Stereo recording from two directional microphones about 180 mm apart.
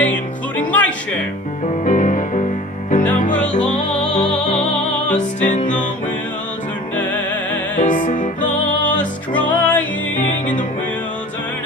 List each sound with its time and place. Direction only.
0.0 s music: 10° left (ahead or behind)
1.8 s music: 45° left (ahead or behind)
3.5 s music: 40° left (ahead or behind)
3.9 s music: 5° left (ahead or behind)
5.4 s music: 45° left (ahead or behind)
7.0 s music: 10° left (ahead or behind)
7.8 s music: 45° left (ahead or behind)
8.9 s music: 10° left (ahead or behind)